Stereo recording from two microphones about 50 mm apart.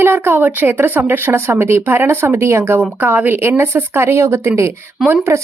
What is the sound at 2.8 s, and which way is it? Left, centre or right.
Speech, right.